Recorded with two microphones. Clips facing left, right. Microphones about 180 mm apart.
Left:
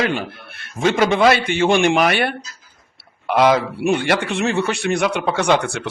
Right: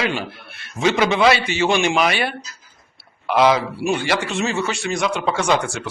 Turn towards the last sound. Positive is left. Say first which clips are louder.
# left 2 dB
turn(degrees=60)  # may be behind; listen again after turning